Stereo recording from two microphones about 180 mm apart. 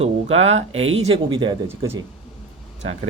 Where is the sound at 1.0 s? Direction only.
30° right (ahead or behind).